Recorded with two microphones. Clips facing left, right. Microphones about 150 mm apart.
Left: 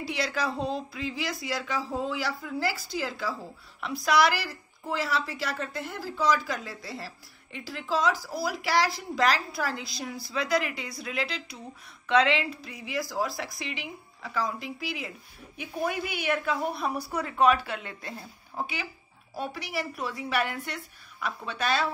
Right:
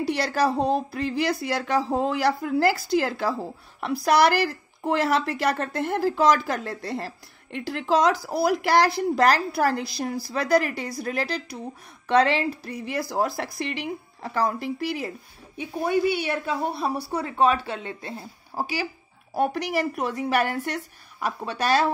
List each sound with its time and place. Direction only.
0.2 s a woman's voice: 60° right (ahead or behind)
6.4 s a woman's voice: 55° right (ahead or behind)
15.5 s a woman's voice: 30° right (ahead or behind)
19.3 s a woman's voice: 60° right (ahead or behind); by 21.9 s 40° right (ahead or behind)